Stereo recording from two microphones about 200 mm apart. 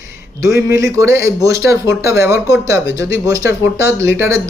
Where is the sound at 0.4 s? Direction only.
15° right (ahead or behind).